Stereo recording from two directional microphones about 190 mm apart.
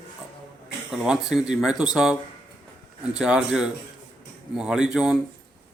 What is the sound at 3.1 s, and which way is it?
Speech, 5° right (ahead or behind).